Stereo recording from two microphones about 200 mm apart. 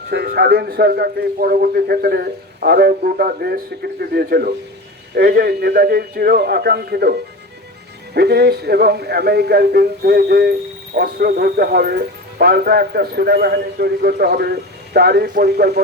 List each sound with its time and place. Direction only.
0.1 s speech: 55° right (ahead or behind)